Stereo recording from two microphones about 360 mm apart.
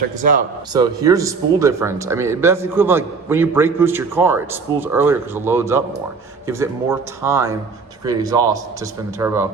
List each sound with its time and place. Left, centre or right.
0.2 s a man's voice: right
0.7 s speech: centre